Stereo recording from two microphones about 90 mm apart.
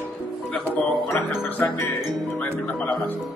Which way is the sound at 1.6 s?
20° left (ahead or behind).